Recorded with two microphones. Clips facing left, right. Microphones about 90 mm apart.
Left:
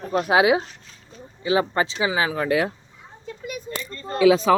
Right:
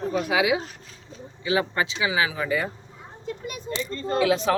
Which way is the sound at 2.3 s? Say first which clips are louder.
Left 4 dB; 55° left (ahead or behind).